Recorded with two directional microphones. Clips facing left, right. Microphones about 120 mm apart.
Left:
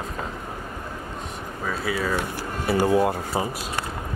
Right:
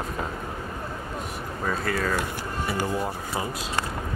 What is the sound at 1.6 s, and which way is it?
Speech, 5° left (ahead or behind).